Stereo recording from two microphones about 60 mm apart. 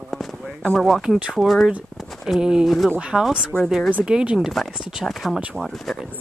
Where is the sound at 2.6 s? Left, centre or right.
Centre.